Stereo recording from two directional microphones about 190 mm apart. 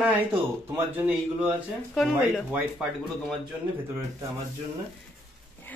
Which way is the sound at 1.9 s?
Centre (ahead or behind).